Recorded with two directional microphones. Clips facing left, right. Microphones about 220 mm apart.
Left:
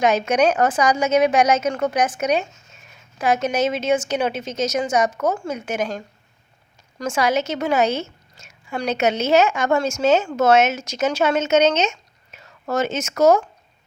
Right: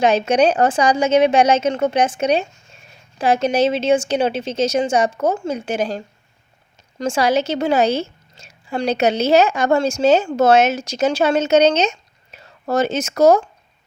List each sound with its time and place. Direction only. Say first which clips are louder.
0.0 s a woman's voice: right 3 dB; 30° right (ahead or behind)
7.0 s a woman's voice: right 3 dB; 30° right (ahead or behind)